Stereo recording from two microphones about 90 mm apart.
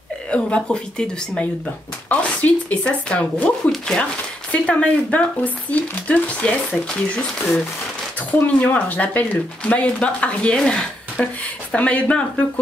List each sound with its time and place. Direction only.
0.3 s speech: 10° left (ahead or behind)